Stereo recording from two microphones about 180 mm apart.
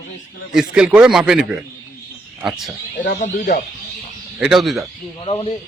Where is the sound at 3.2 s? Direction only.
45° left (ahead or behind).